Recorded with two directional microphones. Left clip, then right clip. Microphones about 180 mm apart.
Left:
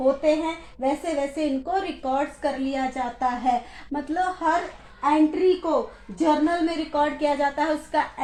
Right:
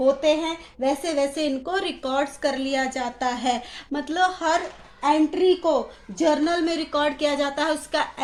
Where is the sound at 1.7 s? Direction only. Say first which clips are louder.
Right 1 dB; 35° right (ahead or behind).